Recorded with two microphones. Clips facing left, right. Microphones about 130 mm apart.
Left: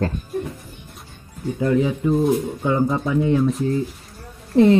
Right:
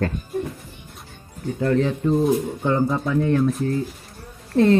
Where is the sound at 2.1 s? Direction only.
Centre (ahead or behind).